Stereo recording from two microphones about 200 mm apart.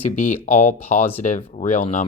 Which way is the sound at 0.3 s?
35° left (ahead or behind).